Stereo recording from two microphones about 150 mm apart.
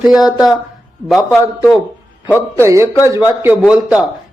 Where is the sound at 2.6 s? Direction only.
20° right (ahead or behind).